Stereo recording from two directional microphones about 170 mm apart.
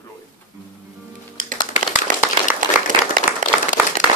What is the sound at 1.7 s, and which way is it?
Clapping, 45° left (ahead or behind).